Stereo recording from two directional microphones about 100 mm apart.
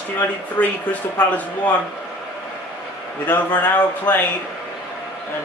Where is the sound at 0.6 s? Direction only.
20° left (ahead or behind).